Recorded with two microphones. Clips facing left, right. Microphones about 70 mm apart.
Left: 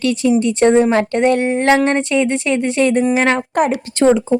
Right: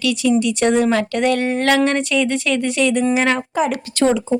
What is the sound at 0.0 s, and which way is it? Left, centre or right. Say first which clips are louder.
Speech: left 2 dB; left.